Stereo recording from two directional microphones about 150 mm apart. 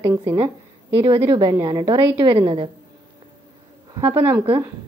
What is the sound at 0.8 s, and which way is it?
A woman's voice, 35° right (ahead or behind).